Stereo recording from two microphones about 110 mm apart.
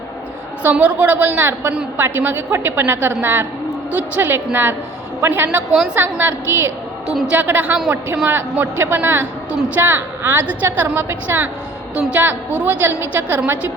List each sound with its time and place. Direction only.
0.6 s a woman's voice: 15° right (ahead or behind)
7.1 s a woman's voice: 5° right (ahead or behind)
7.3 s a woman's voice: 15° right (ahead or behind)